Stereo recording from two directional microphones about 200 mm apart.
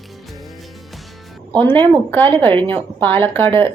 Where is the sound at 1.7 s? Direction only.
10° left (ahead or behind).